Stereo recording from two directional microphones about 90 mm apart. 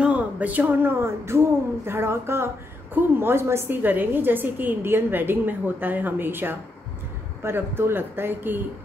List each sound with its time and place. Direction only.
0.0 s speech: 15° right (ahead or behind)